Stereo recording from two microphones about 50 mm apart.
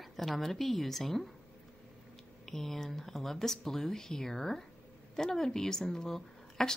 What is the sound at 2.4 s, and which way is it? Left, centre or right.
A woman's voice, centre.